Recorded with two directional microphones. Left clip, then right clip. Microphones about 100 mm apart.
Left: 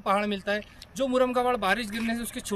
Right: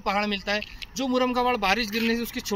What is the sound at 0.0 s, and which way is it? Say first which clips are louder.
Speech: even; 40° left (ahead or behind).